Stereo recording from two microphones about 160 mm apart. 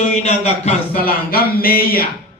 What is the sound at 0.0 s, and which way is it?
Speech, 45° left (ahead or behind).